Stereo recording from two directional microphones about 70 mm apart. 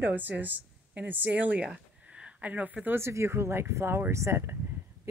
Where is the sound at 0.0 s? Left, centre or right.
Right.